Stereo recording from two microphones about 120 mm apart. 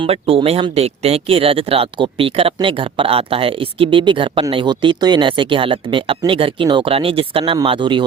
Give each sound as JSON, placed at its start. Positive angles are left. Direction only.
{"t": 0.0, "sound": "speech", "side_deg": -50}